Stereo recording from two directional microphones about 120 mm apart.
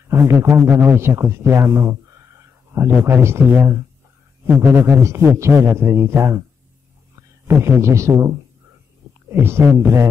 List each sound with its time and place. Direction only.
0.1 s a man's voice: 25° right (ahead or behind)
7.4 s a man's voice: 20° right (ahead or behind)